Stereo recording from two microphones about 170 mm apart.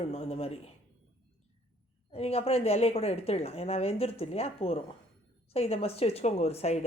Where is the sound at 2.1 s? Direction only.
35° left (ahead or behind).